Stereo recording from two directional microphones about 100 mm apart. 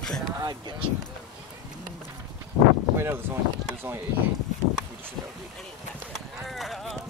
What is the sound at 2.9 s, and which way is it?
Speech, 25° right (ahead or behind).